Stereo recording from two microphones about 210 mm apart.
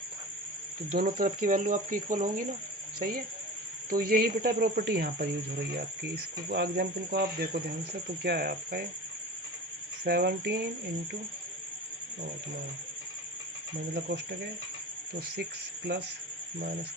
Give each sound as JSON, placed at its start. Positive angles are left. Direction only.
{"t": 0.9, "sound": "speech", "side_deg": -45}
{"t": 10.0, "sound": "speech", "side_deg": -50}
{"t": 13.9, "sound": "speech", "side_deg": -50}